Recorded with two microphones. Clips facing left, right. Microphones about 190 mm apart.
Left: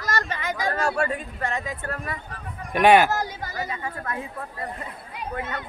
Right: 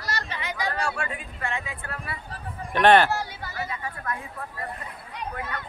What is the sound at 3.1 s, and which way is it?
Speech, 45° left (ahead or behind).